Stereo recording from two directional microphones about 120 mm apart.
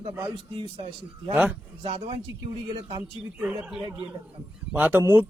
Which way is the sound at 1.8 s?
55° right (ahead or behind).